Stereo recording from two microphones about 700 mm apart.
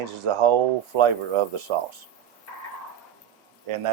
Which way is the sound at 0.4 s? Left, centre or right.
Right.